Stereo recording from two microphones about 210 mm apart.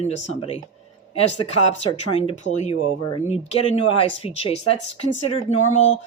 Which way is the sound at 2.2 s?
30° left (ahead or behind).